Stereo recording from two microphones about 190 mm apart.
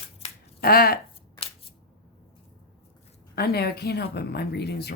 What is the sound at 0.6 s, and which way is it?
Speech, 50° left (ahead or behind).